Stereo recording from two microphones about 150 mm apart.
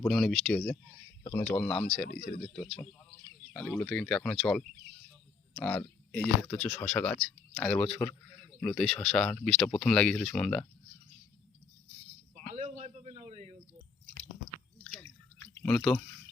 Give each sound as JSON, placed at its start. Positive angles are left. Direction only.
{"t": 0.0, "sound": "speech", "side_deg": 5}
{"t": 1.5, "sound": "speech", "side_deg": 5}
{"t": 12.5, "sound": "a sound", "side_deg": -50}
{"t": 15.6, "sound": "speech", "side_deg": 5}